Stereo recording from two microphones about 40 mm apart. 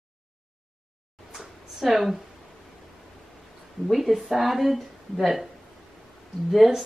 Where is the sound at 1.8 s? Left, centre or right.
Centre.